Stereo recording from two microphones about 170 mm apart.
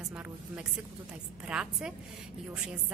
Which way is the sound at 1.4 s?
5° right (ahead or behind).